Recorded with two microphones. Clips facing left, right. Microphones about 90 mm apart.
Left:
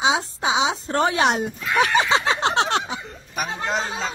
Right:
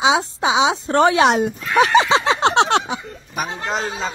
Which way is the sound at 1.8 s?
90° right.